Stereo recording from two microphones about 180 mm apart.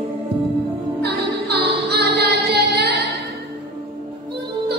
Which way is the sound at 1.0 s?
65° right (ahead or behind).